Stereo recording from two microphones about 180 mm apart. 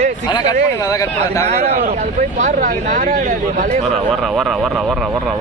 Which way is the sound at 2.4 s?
45° right (ahead or behind).